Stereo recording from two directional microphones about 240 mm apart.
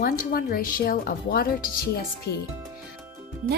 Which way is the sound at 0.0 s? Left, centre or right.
Left.